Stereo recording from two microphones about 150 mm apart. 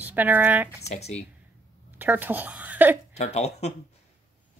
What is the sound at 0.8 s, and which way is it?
Speech, 45° left (ahead or behind).